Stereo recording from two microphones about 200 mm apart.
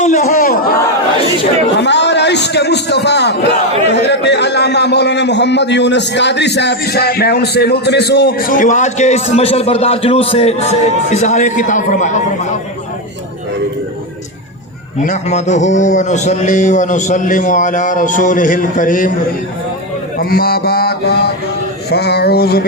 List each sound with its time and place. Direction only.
0.0 s chatter: 35° left (ahead or behind)
1.8 s a man's voice: 60° left (ahead or behind); by 12.2 s 40° left (ahead or behind)
15.0 s a man's voice: 35° left (ahead or behind)
20.1 s a sound: 50° left (ahead or behind)